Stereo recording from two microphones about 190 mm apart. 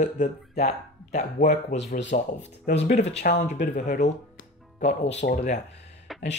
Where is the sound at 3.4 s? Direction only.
40° left (ahead or behind).